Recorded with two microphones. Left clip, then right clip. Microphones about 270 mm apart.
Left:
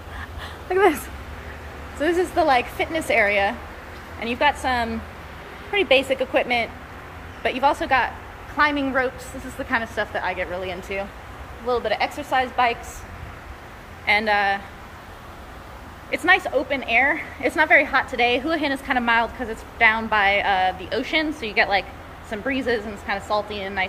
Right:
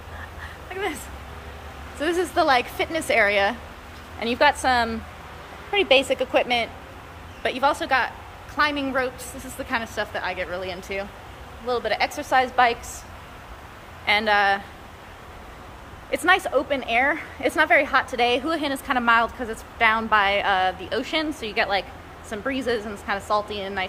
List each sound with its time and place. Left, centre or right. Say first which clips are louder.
0.7 s speech: left 11 dB; centre
2.0 s a woman's voice: left 2 dB; centre
14.0 s a woman's voice: even; centre
16.1 s a woman's voice: left 1 dB; centre